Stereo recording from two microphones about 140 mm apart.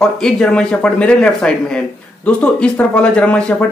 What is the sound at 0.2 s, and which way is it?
Speech, 5° left (ahead or behind).